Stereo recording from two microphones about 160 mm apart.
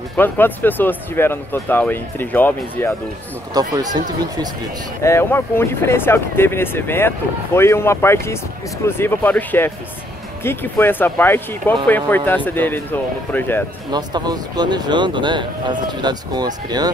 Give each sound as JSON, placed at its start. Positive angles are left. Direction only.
{"t": 0.2, "sound": "speech", "side_deg": 10}
{"t": 3.5, "sound": "speech", "side_deg": -25}
{"t": 5.0, "sound": "speech", "side_deg": 15}
{"t": 13.8, "sound": "speech", "side_deg": -25}